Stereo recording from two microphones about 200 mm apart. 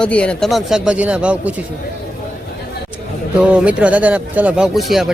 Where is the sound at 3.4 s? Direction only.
5° right (ahead or behind).